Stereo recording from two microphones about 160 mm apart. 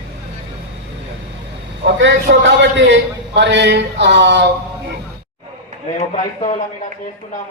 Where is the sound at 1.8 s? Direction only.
90° right.